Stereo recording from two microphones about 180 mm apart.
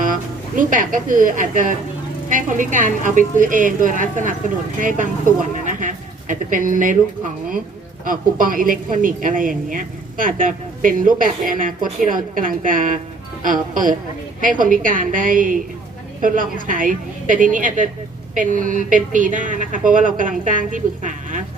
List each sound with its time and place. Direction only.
0.0 s a woman's voice: 50° right (ahead or behind)
8.0 s a woman's voice: 50° right (ahead or behind)